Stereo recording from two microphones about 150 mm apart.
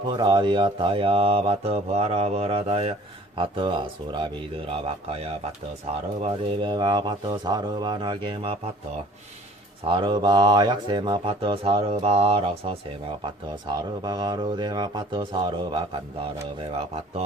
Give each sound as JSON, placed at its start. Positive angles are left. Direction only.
{"t": 0.1, "sound": "speech", "side_deg": -30}
{"t": 6.2, "sound": "speech", "side_deg": -35}
{"t": 9.8, "sound": "speech", "side_deg": -35}